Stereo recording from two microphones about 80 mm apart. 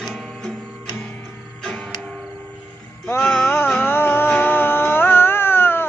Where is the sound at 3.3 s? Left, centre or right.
Left.